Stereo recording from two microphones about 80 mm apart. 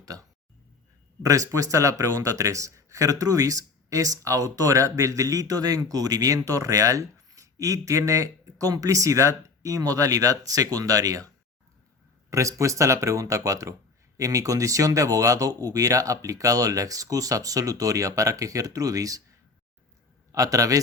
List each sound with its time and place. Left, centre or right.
0.0 s a sound: right
1.2 s speech: right
12.3 s speech: right
20.3 s speech: right